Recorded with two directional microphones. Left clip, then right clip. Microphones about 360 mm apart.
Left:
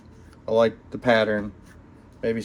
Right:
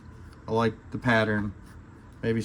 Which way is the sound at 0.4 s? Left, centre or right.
Centre.